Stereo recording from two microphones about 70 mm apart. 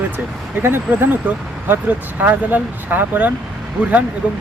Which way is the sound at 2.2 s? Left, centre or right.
Right.